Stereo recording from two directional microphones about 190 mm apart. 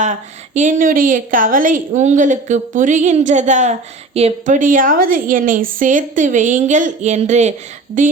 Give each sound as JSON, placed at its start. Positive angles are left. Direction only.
{"t": 0.0, "sound": "a woman's voice", "side_deg": -40}